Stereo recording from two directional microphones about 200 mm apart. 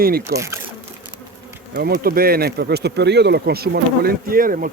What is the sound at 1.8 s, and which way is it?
Speech, 50° right (ahead or behind).